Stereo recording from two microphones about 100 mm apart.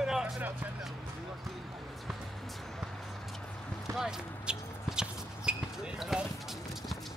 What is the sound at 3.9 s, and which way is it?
Basketball bounce, 5° right (ahead or behind).